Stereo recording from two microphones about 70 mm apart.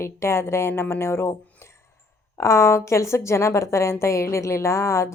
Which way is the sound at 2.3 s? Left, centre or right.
Left.